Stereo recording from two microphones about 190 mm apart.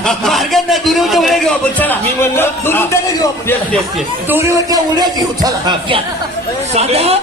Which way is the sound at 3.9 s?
10° right (ahead or behind).